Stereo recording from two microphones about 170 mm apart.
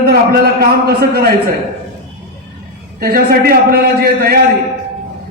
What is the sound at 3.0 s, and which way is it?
A man's voice, 60° right (ahead or behind).